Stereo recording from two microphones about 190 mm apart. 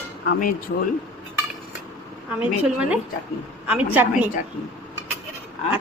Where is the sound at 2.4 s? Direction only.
5° right (ahead or behind).